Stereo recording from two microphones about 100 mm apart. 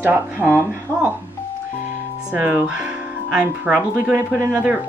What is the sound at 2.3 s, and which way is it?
Speech, 15° right (ahead or behind).